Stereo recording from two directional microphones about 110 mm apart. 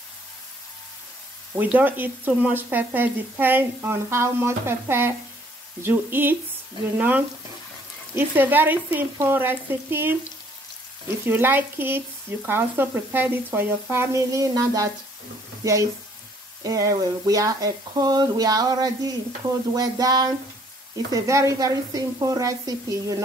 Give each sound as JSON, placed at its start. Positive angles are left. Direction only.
{"t": 1.5, "sound": "speech", "side_deg": -15}
{"t": 5.8, "sound": "sizzle", "side_deg": -20}
{"t": 7.0, "sound": "speech", "side_deg": -15}
{"t": 8.1, "sound": "sizzle", "side_deg": -20}
{"t": 11.2, "sound": "sizzle", "side_deg": -20}
{"t": 16.6, "sound": "speech", "side_deg": -30}
{"t": 21.1, "sound": "sizzle", "side_deg": -30}